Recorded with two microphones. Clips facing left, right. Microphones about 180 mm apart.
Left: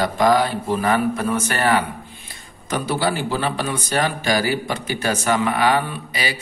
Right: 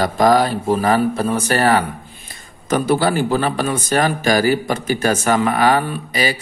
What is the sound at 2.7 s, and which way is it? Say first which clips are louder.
A man's voice: right 6 dB; 50° right (ahead or behind).